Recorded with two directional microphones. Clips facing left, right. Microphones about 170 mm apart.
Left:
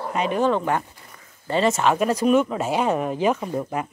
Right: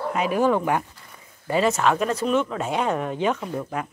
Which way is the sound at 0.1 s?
5° right (ahead or behind).